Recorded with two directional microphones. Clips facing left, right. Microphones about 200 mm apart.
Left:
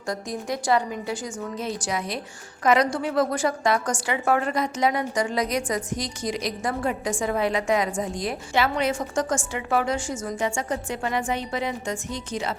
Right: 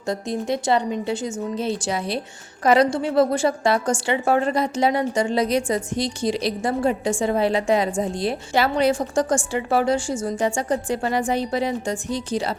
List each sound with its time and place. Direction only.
0.1 s a woman's voice: 25° right (ahead or behind)